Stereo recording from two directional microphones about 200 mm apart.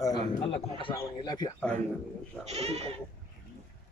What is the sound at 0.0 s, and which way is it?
A man's voice, 20° left (ahead or behind).